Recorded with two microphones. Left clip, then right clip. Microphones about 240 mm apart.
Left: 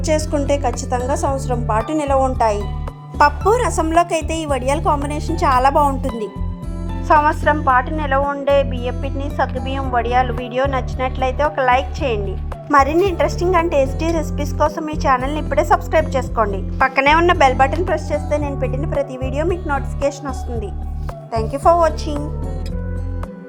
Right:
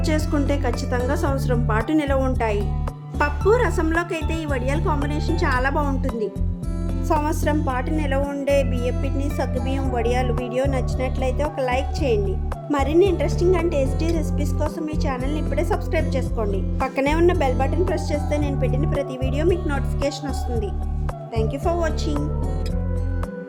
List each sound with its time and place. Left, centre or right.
0.0 s speech: centre
7.7 s speech: centre
13.0 s speech: centre